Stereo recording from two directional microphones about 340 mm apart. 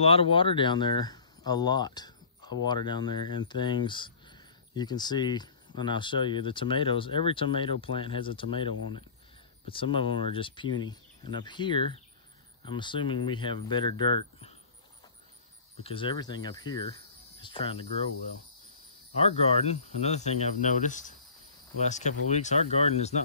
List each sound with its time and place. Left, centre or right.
0.0 s speech: centre
15.8 s speech: centre
19.1 s speech: centre